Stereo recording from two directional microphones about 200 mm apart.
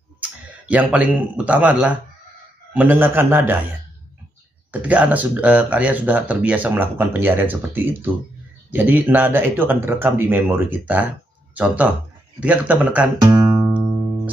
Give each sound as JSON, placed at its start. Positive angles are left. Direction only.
{"t": 0.2, "sound": "a sound", "side_deg": -5}
{"t": 1.3, "sound": "speech", "side_deg": -5}
{"t": 4.8, "sound": "speech", "side_deg": -10}
{"t": 13.2, "sound": "guitar", "side_deg": -20}